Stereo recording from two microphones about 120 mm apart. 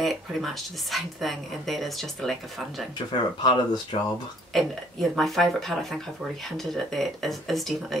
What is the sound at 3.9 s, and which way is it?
Speech, 50° left (ahead or behind).